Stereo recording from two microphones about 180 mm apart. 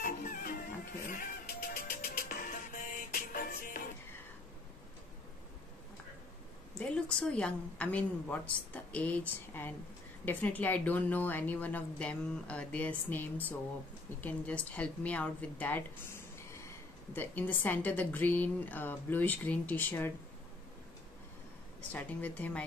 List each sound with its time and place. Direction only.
0.0 s music: 50° left (ahead or behind)
6.8 s speech: 5° left (ahead or behind)
21.9 s speech: 10° left (ahead or behind)